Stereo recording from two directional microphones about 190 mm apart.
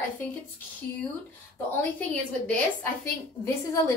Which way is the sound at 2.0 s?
5° left (ahead or behind).